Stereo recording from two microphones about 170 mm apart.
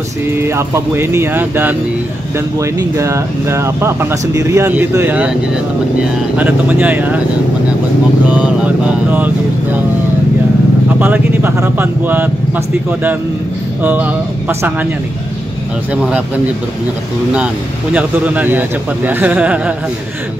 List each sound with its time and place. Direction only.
0.3 s speech: 15° right (ahead or behind)
6.3 s speech: 10° right (ahead or behind)
8.3 s speech: 5° right (ahead or behind)
11.0 s speech: 10° right (ahead or behind)
17.9 s speech: 10° right (ahead or behind)